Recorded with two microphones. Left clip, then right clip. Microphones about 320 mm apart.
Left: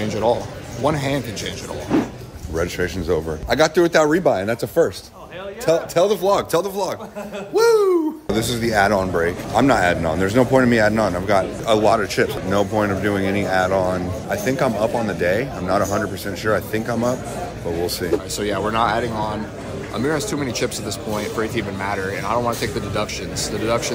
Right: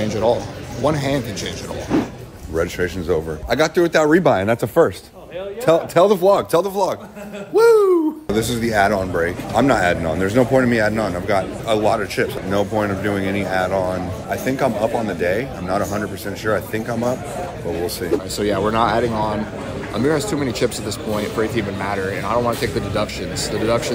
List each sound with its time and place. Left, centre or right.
0.0 s speech: centre
1.9 s speech: centre
4.1 s speech: right
6.2 s speech: centre